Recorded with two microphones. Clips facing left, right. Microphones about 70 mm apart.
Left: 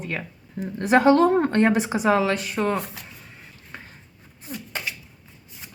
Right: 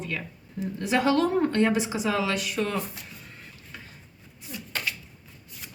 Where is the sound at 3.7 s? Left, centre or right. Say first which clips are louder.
Left 4 dB; left.